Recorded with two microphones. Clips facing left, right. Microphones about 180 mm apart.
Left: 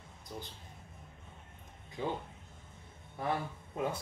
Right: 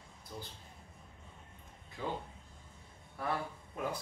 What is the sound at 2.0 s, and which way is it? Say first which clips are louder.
Speech: left 3 dB; 20° left (ahead or behind).